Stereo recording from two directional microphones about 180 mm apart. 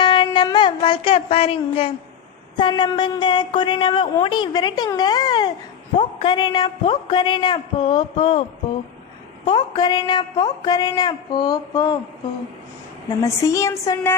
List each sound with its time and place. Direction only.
0.0 s a sound: 25° left (ahead or behind)
2.6 s speech: 25° left (ahead or behind)
13.2 s a woman's voice: 20° left (ahead or behind)